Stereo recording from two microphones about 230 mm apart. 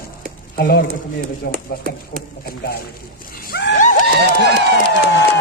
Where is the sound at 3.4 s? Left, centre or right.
Left.